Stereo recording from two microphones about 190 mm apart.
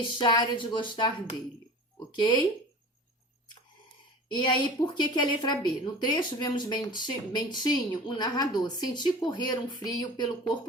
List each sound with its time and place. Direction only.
0.2 s speech: 25° left (ahead or behind)
4.3 s speech: 25° left (ahead or behind)